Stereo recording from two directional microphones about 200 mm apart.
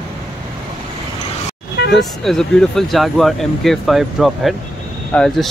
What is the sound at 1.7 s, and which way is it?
Vehicle, 55° left (ahead or behind).